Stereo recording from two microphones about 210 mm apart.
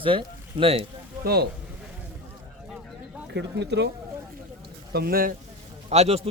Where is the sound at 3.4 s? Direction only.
55° right (ahead or behind).